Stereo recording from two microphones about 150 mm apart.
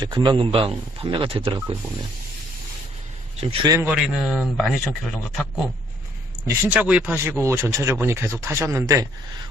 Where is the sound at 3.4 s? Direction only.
35° right (ahead or behind).